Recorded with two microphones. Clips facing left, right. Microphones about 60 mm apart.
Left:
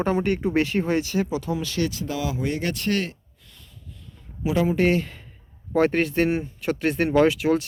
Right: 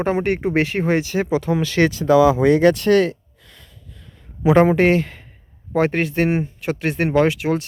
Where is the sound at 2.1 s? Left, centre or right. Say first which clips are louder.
Right 14 dB; right.